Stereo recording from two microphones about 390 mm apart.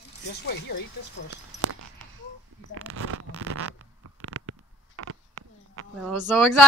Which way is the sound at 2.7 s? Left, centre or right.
Right.